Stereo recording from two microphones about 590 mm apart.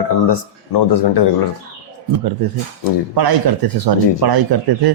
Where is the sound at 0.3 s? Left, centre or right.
Left.